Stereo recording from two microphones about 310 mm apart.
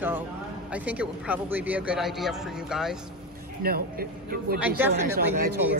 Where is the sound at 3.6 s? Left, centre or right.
Right.